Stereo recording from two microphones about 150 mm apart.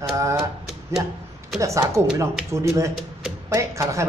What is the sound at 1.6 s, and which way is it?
A woman's voice, 20° right (ahead or behind).